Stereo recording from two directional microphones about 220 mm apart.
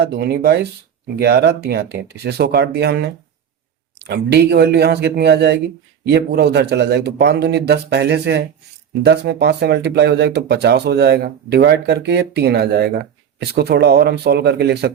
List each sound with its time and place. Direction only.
0.0 s speech: 45° right (ahead or behind)